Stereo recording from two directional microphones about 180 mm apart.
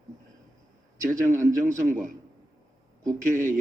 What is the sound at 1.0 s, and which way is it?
A man's voice, 45° right (ahead or behind).